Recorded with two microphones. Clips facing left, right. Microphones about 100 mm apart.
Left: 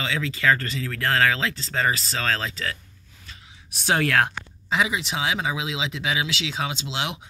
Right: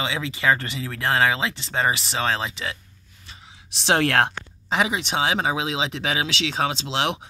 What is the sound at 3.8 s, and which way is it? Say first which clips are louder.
Speech: right 2 dB; 70° right (ahead or behind).